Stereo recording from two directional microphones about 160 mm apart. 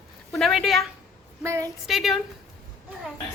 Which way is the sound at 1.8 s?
Centre (ahead or behind).